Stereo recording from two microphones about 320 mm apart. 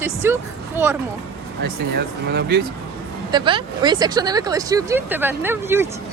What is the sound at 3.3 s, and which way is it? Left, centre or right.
Speech, centre.